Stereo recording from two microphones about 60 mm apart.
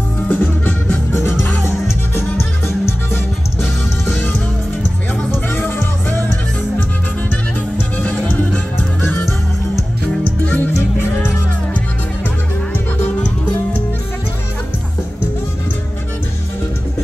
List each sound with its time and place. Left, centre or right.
0.3 s music: left
1.4 s music: left
10.4 s music: left